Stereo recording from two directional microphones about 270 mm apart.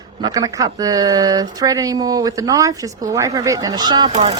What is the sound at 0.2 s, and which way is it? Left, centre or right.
Speech, centre.